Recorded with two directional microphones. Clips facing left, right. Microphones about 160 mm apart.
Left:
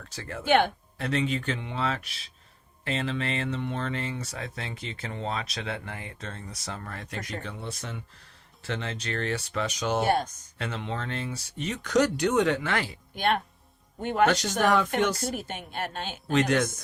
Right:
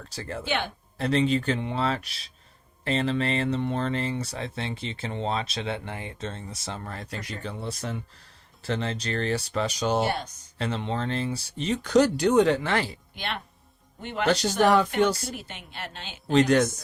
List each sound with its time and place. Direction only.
0.1 s speech: 35° right (ahead or behind)
0.4 s speech: 55° left (ahead or behind)
0.9 s speech: 30° right (ahead or behind)
10.1 s speech: 45° left (ahead or behind)
10.6 s speech: 30° right (ahead or behind)
13.1 s speech: 50° left (ahead or behind)
14.6 s speech: 35° right (ahead or behind)
15.3 s speech: 50° left (ahead or behind)
16.2 s speech: 30° right (ahead or behind)